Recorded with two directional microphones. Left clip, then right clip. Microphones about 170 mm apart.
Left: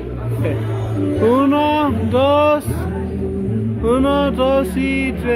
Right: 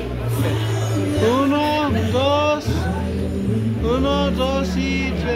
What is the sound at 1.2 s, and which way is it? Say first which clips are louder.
Music: left 4 dB; 25° left (ahead or behind).